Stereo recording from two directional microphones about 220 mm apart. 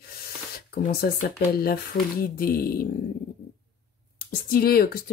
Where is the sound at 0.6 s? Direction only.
45° left (ahead or behind).